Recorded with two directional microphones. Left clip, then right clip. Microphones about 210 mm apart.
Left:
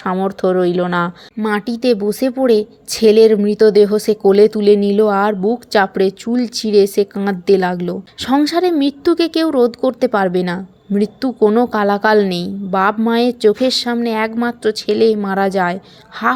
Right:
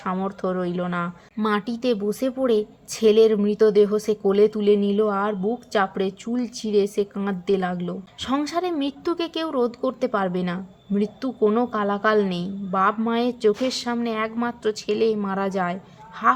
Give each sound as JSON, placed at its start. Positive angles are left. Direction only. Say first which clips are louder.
{"t": 0.0, "sound": "speech", "louder": "left 9 dB", "side_deg": 30}
{"t": 1.5, "sound": "a woman's voice", "louder": "left 7 dB", "side_deg": 20}